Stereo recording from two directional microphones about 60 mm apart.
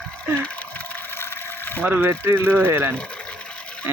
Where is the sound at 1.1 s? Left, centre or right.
Left.